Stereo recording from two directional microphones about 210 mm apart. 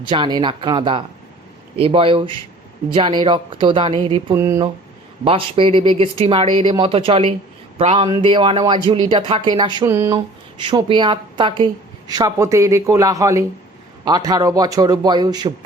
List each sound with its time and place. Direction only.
0.1 s a woman's voice: 20° right (ahead or behind)
4.4 s speech: 15° right (ahead or behind)
5.2 s a woman's voice: 25° right (ahead or behind)
10.6 s a woman's voice: 25° right (ahead or behind)